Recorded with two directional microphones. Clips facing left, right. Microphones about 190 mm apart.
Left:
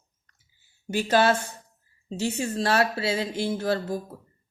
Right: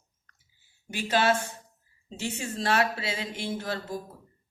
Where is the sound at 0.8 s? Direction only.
40° left (ahead or behind).